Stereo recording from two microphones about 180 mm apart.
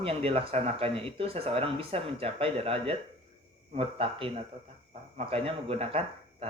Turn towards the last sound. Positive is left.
turn(degrees=-35)  # may be behind; listen again after turning